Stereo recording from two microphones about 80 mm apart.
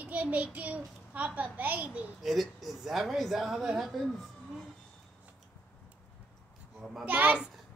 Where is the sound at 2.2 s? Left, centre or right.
Centre.